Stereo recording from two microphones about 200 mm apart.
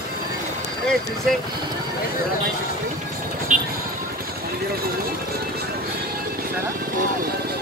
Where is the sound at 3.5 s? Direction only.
40° right (ahead or behind).